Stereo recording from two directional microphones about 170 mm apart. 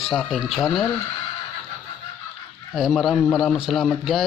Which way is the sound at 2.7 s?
Centre (ahead or behind).